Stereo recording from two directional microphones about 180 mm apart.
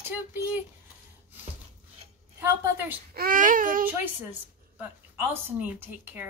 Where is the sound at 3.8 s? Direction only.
10° right (ahead or behind).